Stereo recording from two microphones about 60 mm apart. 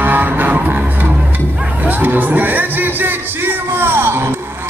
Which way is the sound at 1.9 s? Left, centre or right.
Right.